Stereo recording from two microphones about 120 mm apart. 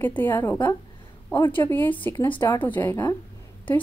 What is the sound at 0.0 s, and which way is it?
A woman's voice, 15° left (ahead or behind).